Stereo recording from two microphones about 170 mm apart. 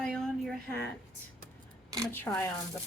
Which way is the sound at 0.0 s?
Centre (ahead or behind).